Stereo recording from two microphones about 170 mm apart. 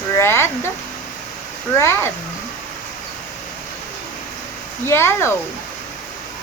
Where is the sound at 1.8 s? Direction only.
15° left (ahead or behind).